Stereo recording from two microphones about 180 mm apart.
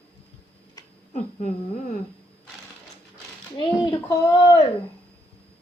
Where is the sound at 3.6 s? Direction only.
20° left (ahead or behind).